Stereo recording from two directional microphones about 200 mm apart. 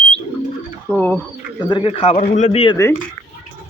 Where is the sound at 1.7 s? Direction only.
25° left (ahead or behind).